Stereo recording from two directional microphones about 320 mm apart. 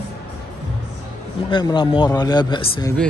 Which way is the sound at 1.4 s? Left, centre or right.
Centre.